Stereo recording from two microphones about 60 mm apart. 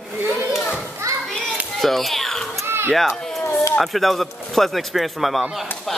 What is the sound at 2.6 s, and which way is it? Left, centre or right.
Baby cry, right.